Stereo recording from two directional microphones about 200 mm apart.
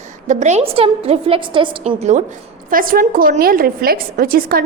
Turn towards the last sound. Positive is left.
turn(degrees=-45)  # may be behind; listen again after turning